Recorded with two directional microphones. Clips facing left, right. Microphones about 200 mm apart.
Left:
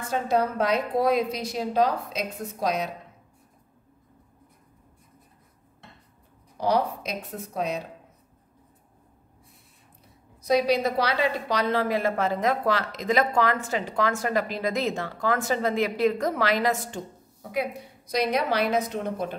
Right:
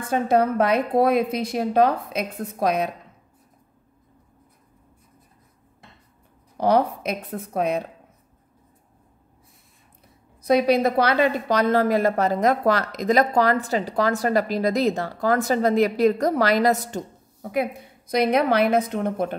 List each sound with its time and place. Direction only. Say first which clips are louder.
0.1 s a woman's voice: right 5 dB; 55° right (ahead or behind)
6.6 s a woman's voice: right 5 dB; 55° right (ahead or behind)
10.4 s a woman's voice: right 4 dB; 55° right (ahead or behind)